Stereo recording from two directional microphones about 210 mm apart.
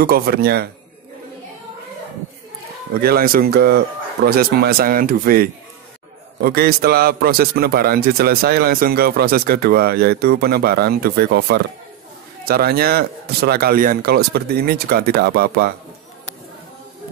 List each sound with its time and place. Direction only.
0.0 s a man's voice: 45° right (ahead or behind)
2.9 s a man's voice: 45° right (ahead or behind)